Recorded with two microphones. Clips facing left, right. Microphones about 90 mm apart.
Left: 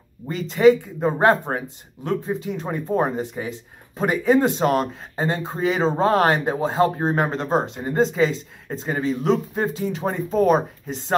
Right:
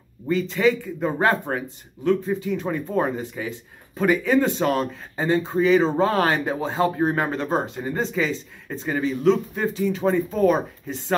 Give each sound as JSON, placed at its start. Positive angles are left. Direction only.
{"t": 0.7, "sound": "speech", "side_deg": 25}